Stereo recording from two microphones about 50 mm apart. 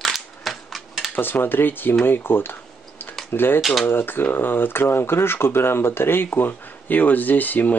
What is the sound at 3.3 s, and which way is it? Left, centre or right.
Speech, left.